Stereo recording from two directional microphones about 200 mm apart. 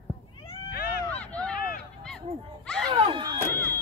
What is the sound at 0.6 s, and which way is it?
Cat, 50° left (ahead or behind).